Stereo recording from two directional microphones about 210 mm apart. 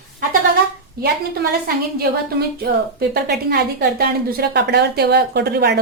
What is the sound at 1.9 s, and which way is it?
A woman's voice, 50° right (ahead or behind).